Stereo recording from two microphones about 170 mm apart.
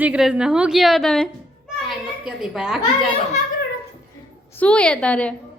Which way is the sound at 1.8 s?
Centre (ahead or behind).